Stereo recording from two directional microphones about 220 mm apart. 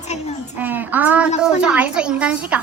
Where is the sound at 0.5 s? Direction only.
10° right (ahead or behind).